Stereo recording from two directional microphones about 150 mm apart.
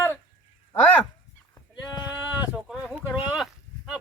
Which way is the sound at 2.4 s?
5° right (ahead or behind).